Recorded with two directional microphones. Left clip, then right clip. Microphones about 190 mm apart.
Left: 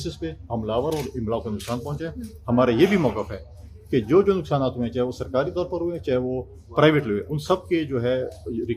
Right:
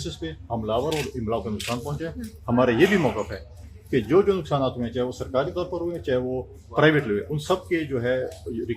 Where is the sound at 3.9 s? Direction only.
30° left (ahead or behind).